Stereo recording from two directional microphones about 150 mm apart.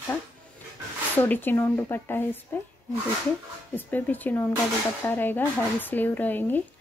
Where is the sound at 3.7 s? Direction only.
10° left (ahead or behind).